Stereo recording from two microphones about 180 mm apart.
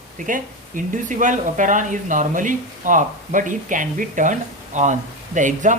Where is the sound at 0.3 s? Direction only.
45° right (ahead or behind).